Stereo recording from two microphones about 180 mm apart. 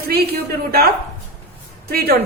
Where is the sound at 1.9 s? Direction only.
60° right (ahead or behind).